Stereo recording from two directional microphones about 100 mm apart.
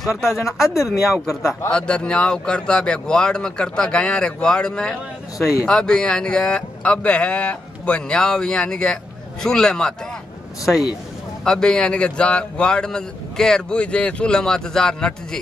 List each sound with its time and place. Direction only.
0.0 s speech: centre (ahead or behind)
0.6 s speech: 35° left (ahead or behind)
1.7 s speech: 10° left (ahead or behind)
11.4 s speech: 5° left (ahead or behind)